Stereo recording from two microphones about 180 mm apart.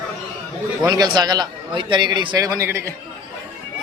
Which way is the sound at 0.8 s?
20° right (ahead or behind).